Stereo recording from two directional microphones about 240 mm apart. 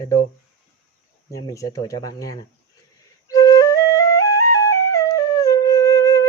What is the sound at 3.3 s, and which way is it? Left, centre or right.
Flute, centre.